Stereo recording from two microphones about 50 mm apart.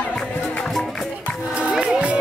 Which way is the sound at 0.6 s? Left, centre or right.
Centre.